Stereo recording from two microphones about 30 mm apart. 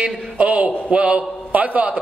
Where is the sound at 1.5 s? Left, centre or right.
Right.